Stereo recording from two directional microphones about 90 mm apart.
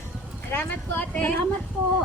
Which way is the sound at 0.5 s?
15° left (ahead or behind).